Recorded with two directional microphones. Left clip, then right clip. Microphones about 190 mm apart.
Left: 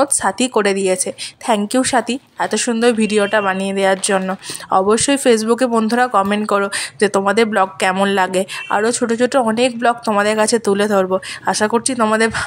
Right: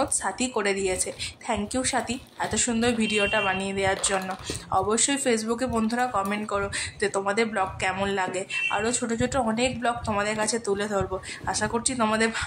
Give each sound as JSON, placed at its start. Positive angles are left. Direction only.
{"t": 0.0, "sound": "a woman's voice", "side_deg": 45}